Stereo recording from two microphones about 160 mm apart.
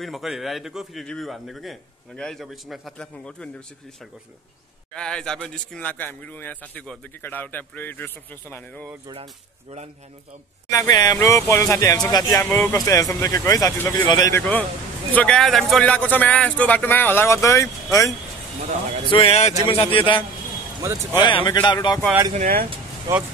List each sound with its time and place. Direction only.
0.0 s a man's voice: centre (ahead or behind)
4.9 s a man's voice: 5° left (ahead or behind)
9.1 s speech: 35° right (ahead or behind)
10.7 s a man's voice: 20° left (ahead or behind)
14.4 s a man's voice: 10° left (ahead or behind)
18.6 s a man's voice: 50° right (ahead or behind)
19.0 s speech: 35° left (ahead or behind)
22.3 s speech: 60° right (ahead or behind)
23.1 s speech: 20° right (ahead or behind)